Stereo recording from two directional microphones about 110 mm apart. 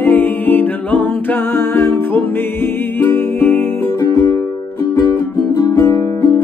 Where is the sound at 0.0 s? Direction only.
15° left (ahead or behind).